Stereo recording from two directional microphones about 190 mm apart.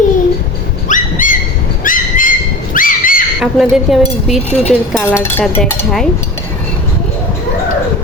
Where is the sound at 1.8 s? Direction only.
45° left (ahead or behind).